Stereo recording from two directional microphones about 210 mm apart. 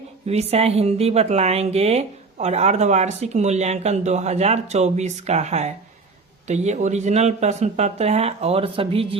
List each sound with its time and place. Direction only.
0.3 s speech: 30° right (ahead or behind)